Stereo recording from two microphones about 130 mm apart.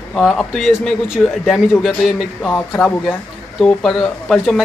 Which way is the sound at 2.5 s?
15° left (ahead or behind).